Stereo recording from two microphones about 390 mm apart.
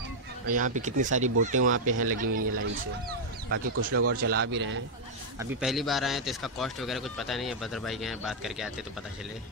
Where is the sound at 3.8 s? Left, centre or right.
Right.